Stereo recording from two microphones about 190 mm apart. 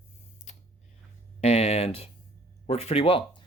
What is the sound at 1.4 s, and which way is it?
Speech, 35° left (ahead or behind).